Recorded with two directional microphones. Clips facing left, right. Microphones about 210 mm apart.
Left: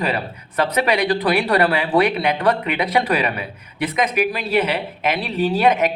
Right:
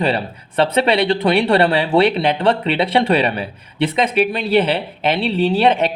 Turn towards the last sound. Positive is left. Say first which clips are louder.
# right 2 dB
turn(degrees=-30)  # may be behind; listen again after turning